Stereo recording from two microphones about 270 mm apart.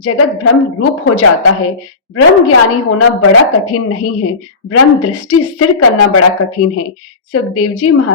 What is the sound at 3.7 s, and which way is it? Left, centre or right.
A woman's voice, left.